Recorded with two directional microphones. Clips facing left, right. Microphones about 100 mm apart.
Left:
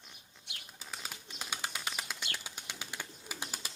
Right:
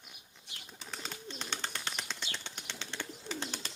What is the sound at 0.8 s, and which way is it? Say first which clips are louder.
Bird: right 2 dB; 5° left (ahead or behind).